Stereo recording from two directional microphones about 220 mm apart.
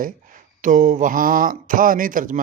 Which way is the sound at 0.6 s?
35° right (ahead or behind).